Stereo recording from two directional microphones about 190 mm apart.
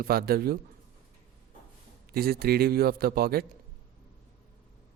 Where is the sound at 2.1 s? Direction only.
55° right (ahead or behind).